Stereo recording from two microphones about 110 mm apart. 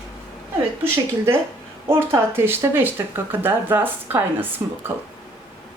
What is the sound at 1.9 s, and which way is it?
Speech, 20° right (ahead or behind).